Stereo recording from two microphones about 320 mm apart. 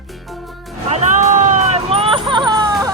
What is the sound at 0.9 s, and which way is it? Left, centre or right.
Hubbub, right.